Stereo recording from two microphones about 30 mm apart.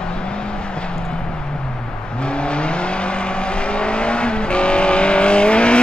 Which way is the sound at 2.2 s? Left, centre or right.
Left.